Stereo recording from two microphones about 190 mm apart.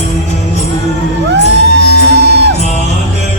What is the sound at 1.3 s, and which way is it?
Music, 65° right (ahead or behind).